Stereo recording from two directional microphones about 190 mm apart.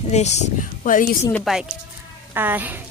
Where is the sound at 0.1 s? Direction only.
35° left (ahead or behind).